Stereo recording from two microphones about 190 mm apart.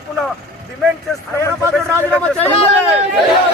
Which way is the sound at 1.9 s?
5° left (ahead or behind).